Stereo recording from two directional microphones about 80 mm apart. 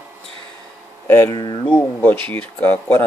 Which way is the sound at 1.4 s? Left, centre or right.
Left.